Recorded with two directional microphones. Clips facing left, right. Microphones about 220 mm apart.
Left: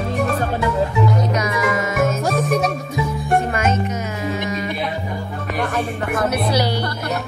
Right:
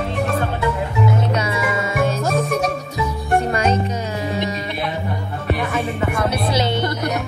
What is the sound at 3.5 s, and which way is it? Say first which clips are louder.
Music: right 1 dB; 35° right (ahead or behind).